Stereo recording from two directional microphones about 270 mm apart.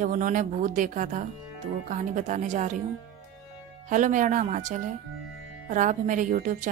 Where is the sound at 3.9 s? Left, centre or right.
Right.